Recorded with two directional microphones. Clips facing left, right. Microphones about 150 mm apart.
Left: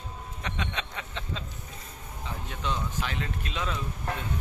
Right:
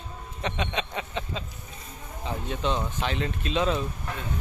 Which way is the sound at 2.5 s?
25° right (ahead or behind).